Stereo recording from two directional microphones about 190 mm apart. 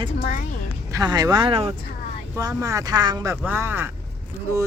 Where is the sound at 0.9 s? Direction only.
20° right (ahead or behind).